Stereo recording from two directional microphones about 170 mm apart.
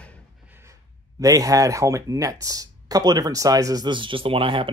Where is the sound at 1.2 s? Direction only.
20° right (ahead or behind).